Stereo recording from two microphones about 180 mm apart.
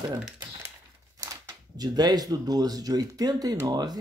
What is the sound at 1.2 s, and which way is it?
Speech, 20° right (ahead or behind).